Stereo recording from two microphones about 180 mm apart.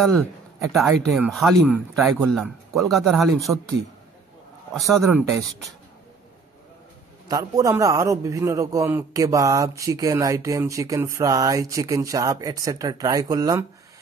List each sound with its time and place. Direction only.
0.0 s speech: centre (ahead or behind)
4.7 s speech: centre (ahead or behind)
5.0 s a man's voice: 15° right (ahead or behind)
7.2 s a man's voice: 20° right (ahead or behind)